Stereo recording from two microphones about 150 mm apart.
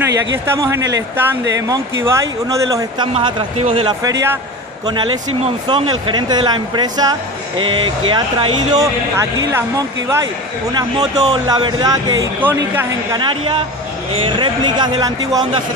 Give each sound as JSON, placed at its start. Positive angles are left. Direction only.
{"t": 0.5, "sound": "speech", "side_deg": -20}
{"t": 3.2, "sound": "speech", "side_deg": -35}
{"t": 4.0, "sound": "speech", "side_deg": -20}
{"t": 4.8, "sound": "speech", "side_deg": -30}
{"t": 9.1, "sound": "speech", "side_deg": -20}
{"t": 12.4, "sound": "speech", "side_deg": -10}
{"t": 13.1, "sound": "speech", "side_deg": -30}